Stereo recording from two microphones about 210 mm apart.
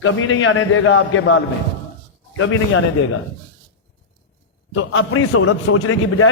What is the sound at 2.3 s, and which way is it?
Speech, 75° left (ahead or behind).